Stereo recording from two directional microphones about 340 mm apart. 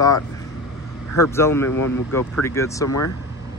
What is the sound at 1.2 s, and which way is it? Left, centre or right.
Speech, centre.